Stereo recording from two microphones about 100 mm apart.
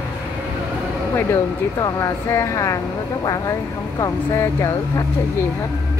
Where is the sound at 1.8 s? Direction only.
35° left (ahead or behind).